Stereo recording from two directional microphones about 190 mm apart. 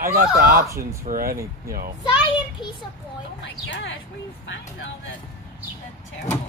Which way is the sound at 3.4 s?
75° left (ahead or behind).